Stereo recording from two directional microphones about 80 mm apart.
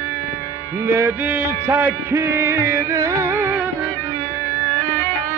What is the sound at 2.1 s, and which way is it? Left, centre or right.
Music, right.